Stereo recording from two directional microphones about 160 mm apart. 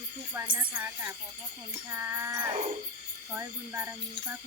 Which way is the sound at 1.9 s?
15° right (ahead or behind).